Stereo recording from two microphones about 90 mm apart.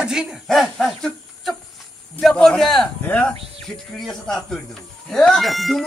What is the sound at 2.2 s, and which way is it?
Speech, 5° left (ahead or behind).